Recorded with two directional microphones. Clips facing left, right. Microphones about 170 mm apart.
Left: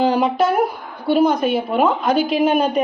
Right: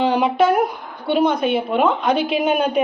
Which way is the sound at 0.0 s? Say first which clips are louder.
Even; centre (ahead or behind).